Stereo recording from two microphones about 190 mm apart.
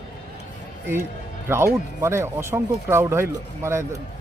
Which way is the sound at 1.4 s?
15° right (ahead or behind).